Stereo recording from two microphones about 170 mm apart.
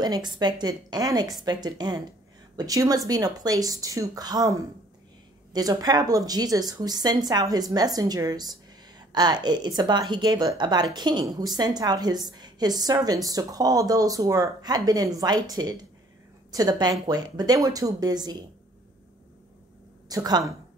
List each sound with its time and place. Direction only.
0.0 s a woman's voice: 25° right (ahead or behind)
20.1 s a woman's voice: 20° right (ahead or behind)